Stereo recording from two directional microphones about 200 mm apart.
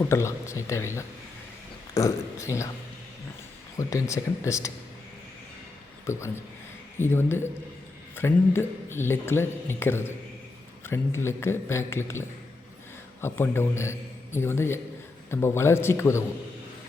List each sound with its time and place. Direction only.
0.0 s speech: 15° left (ahead or behind)
2.0 s speech: 15° left (ahead or behind)
3.8 s speech: 15° left (ahead or behind)
6.1 s speech: 15° left (ahead or behind)
13.2 s speech: 10° left (ahead or behind)